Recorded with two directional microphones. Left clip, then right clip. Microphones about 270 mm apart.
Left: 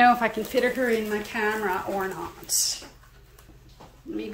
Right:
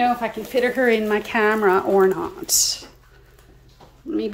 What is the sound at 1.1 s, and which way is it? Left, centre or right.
Speech, centre.